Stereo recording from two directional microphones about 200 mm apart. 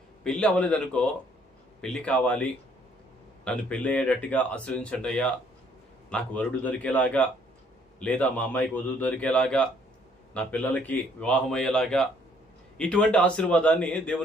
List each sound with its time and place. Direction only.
0.3 s a man's voice: 5° left (ahead or behind)